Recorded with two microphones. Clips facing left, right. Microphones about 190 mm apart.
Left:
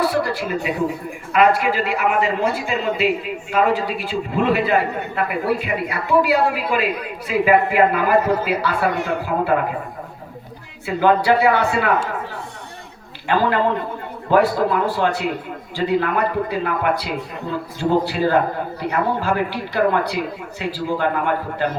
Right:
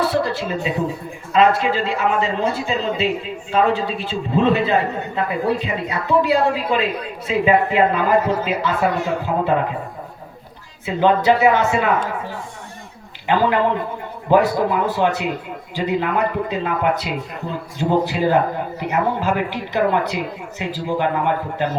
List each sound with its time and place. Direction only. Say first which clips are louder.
0.0 s a sound: even; 25° right (ahead or behind)
1.3 s a woman's voice: right 1 dB; 25° right (ahead or behind)
10.8 s a woman's voice: even; 20° right (ahead or behind)
13.2 s a man's voice: right 1 dB; 20° right (ahead or behind)